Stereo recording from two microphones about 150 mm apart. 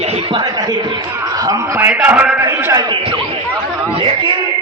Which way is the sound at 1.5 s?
15° right (ahead or behind).